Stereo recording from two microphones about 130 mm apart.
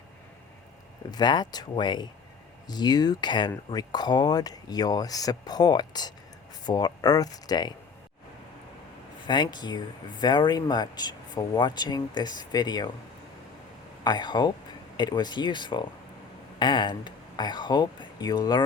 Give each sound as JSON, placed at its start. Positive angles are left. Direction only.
{"t": 1.1, "sound": "speech", "side_deg": 35}
{"t": 9.2, "sound": "speech", "side_deg": 35}
{"t": 14.0, "sound": "speech", "side_deg": 35}